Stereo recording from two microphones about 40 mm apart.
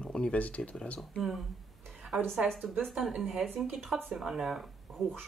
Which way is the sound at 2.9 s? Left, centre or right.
Centre.